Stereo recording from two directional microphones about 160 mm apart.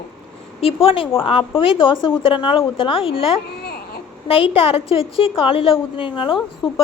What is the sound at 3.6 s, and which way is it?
Baby cry, 75° left (ahead or behind).